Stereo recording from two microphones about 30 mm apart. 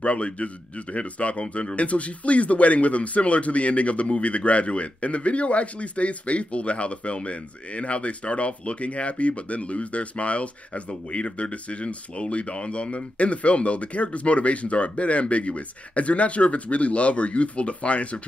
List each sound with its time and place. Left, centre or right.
0.0 s speech: left